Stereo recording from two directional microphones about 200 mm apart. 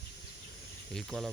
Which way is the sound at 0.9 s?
Centre (ahead or behind).